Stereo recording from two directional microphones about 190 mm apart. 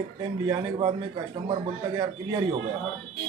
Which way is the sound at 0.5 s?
25° right (ahead or behind).